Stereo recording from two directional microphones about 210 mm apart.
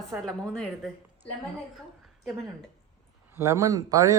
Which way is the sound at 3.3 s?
10° right (ahead or behind).